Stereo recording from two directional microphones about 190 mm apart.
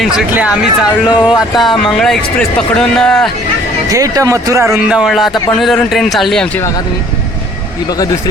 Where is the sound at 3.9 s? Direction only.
20° right (ahead or behind); by 6.8 s 15° left (ahead or behind).